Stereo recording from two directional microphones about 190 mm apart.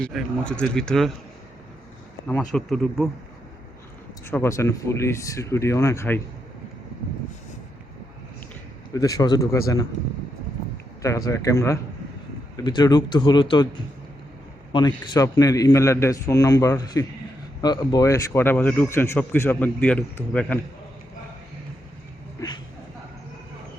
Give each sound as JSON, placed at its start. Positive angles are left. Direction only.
{"t": 0.0, "sound": "speech", "side_deg": 0}
{"t": 2.5, "sound": "speech", "side_deg": 0}
{"t": 4.3, "sound": "a man's voice", "side_deg": 15}
{"t": 8.9, "sound": "a man's voice", "side_deg": 20}
{"t": 11.0, "sound": "a man's voice", "side_deg": 15}
{"t": 14.7, "sound": "a man's voice", "side_deg": 25}
{"t": 22.4, "sound": "a sound", "side_deg": 25}